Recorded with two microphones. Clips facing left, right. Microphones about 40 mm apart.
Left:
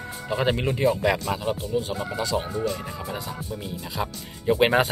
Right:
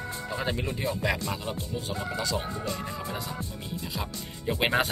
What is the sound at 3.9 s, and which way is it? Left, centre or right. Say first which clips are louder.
Speech: left 5 dB; centre.